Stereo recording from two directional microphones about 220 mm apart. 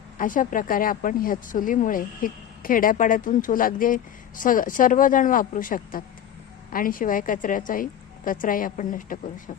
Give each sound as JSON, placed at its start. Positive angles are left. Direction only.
{"t": 0.2, "sound": "speech", "side_deg": 40}